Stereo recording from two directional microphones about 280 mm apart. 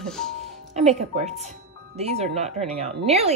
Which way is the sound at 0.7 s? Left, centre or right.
Right.